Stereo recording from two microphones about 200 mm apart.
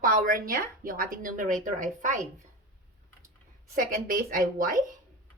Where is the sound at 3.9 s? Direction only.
45° right (ahead or behind).